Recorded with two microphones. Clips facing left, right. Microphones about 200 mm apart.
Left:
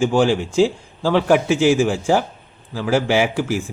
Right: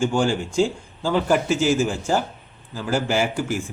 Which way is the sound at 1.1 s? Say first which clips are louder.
Left 4 dB; 75° left (ahead or behind).